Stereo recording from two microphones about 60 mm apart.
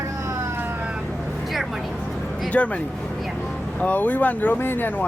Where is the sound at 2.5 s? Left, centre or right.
Centre.